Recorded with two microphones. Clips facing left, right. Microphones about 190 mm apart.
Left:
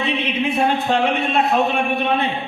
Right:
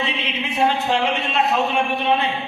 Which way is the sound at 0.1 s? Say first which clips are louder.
Left 6 dB; 55° left (ahead or behind).